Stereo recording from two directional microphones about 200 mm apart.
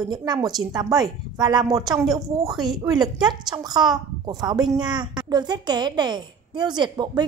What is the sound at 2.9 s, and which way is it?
A woman's voice, 20° right (ahead or behind).